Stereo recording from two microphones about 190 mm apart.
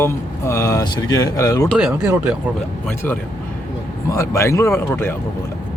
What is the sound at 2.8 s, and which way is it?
A man's voice, 10° left (ahead or behind).